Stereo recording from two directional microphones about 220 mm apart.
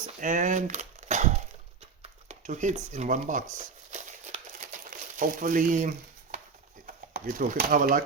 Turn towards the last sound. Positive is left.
turn(degrees=-40)  # may be behind; listen again after turning